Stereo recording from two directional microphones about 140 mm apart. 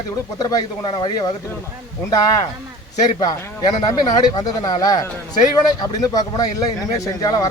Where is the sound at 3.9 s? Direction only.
30° left (ahead or behind).